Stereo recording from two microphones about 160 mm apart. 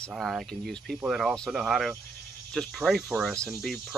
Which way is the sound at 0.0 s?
Centre (ahead or behind).